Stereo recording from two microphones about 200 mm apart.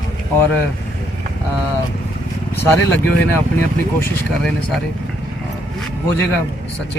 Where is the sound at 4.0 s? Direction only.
5° left (ahead or behind).